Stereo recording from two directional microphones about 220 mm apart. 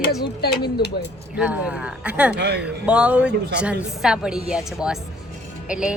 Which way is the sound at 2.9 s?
5° right (ahead or behind).